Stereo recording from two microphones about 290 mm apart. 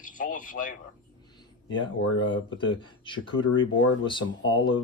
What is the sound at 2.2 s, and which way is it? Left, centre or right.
Speech, left.